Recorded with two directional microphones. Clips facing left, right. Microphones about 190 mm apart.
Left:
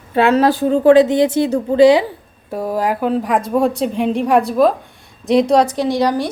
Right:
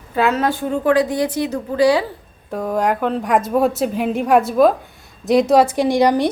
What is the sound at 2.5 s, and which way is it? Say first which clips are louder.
A woman's voice: even; 5° left (ahead or behind).